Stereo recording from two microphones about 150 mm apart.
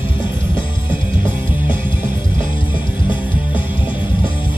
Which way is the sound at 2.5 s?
35° left (ahead or behind).